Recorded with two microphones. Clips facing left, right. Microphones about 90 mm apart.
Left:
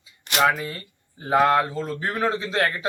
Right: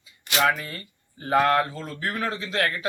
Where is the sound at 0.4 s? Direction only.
10° left (ahead or behind).